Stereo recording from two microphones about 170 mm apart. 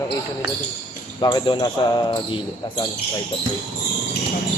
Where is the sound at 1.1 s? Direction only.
25° left (ahead or behind).